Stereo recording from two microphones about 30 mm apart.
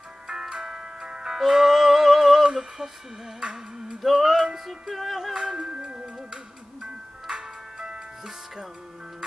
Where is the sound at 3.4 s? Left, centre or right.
Right.